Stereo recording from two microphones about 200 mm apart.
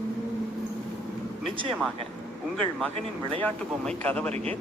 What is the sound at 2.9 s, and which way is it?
Speech, 30° right (ahead or behind).